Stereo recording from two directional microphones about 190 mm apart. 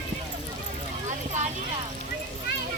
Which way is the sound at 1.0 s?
40° right (ahead or behind).